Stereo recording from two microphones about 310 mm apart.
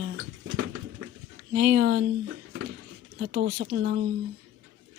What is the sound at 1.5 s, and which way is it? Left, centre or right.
Speech, right.